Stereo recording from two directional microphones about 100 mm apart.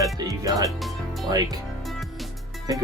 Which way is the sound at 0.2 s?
35° right (ahead or behind).